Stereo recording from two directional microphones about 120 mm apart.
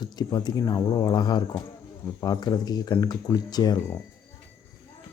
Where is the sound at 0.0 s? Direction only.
35° left (ahead or behind).